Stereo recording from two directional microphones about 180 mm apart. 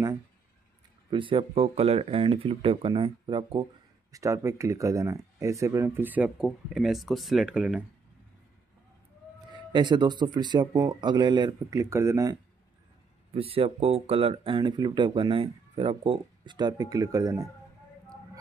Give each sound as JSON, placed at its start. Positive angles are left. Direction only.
{"t": 1.1, "sound": "speech", "side_deg": -30}
{"t": 9.6, "sound": "speech", "side_deg": -25}
{"t": 13.3, "sound": "speech", "side_deg": -30}